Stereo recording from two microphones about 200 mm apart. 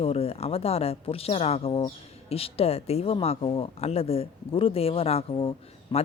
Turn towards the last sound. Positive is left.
turn(degrees=30)  # may be behind; listen again after turning